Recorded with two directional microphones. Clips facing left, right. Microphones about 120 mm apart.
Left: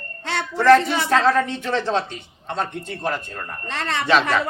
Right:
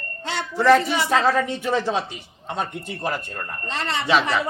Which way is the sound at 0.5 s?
10° right (ahead or behind).